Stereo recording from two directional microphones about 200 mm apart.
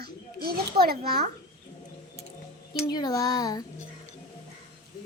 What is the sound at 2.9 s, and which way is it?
Speech, 20° left (ahead or behind).